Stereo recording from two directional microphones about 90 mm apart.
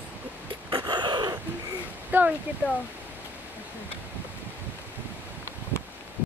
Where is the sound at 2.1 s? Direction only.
20° right (ahead or behind).